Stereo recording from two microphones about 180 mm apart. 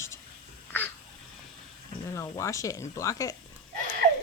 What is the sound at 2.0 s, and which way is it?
Speech, 15° left (ahead or behind).